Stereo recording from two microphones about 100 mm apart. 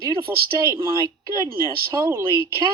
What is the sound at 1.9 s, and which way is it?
Speech, 30° right (ahead or behind).